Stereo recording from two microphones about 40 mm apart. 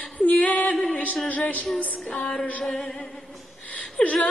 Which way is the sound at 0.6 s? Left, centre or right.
Left.